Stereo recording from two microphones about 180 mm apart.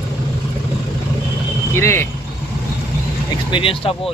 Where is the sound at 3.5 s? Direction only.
30° left (ahead or behind).